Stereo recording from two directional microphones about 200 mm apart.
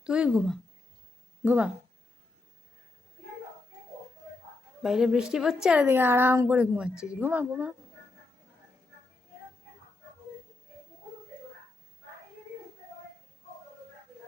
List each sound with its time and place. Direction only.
0.0 s a woman's voice: 5° right (ahead or behind)
4.8 s a woman's voice: centre (ahead or behind)